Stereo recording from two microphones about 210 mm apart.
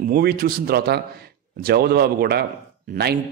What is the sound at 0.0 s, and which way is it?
A man's voice, 45° right (ahead or behind).